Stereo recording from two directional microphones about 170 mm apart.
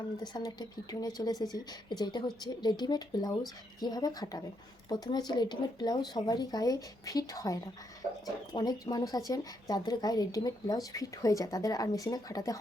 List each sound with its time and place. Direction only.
0.2 s speech: 25° left (ahead or behind)